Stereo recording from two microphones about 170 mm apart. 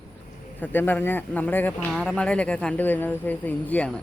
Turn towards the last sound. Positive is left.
turn(degrees=10)  # may be behind; listen again after turning